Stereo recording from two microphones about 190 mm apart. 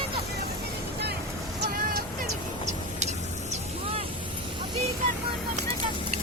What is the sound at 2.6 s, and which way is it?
Vehicle, 35° right (ahead or behind).